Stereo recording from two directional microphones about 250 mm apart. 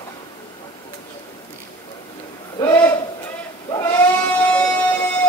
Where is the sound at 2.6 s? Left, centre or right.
Centre.